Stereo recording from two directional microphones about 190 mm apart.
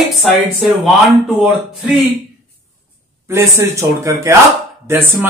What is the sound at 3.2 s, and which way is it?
A man's voice, 15° right (ahead or behind).